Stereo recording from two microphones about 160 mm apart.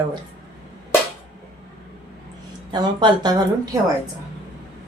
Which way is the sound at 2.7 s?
30° right (ahead or behind).